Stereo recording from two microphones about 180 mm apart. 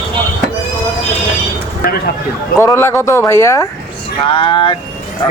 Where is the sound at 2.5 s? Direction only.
15° left (ahead or behind).